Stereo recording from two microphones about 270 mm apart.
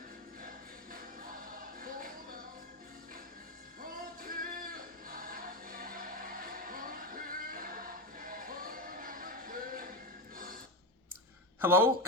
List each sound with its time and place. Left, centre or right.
0.4 s music: right
3.8 s music: right
10.3 s a sound: right
11.6 s speech: centre